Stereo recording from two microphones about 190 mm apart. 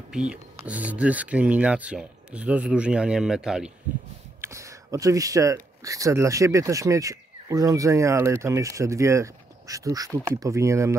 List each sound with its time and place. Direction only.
0.3 s speech: 5° right (ahead or behind)
4.4 s speech: 15° right (ahead or behind)